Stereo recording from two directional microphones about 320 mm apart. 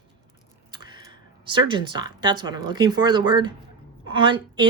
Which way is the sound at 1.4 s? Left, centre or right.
Centre.